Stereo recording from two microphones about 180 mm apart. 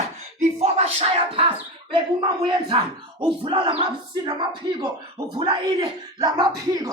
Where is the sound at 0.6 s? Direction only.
35° right (ahead or behind).